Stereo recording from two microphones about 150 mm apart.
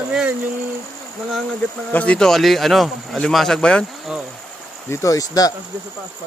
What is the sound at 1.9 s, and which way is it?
Speech, 10° left (ahead or behind).